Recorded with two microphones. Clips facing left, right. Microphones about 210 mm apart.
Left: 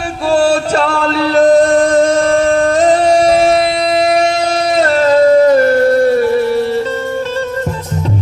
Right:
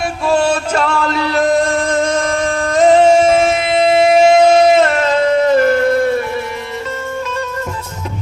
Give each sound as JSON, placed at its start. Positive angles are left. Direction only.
{"t": 0.3, "sound": "male singing", "side_deg": 40}
{"t": 3.2, "sound": "music", "side_deg": 35}
{"t": 4.0, "sound": "a sound", "side_deg": -25}
{"t": 4.8, "sound": "music", "side_deg": 35}